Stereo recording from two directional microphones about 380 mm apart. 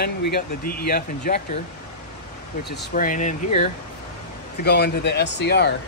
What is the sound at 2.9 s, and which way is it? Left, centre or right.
Speech, centre.